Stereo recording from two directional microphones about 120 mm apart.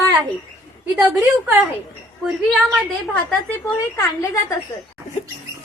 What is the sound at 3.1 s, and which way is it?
A woman's voice, 15° left (ahead or behind).